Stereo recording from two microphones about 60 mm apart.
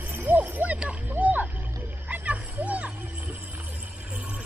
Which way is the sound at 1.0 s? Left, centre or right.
Right.